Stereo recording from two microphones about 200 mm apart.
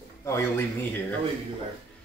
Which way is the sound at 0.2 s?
15° left (ahead or behind).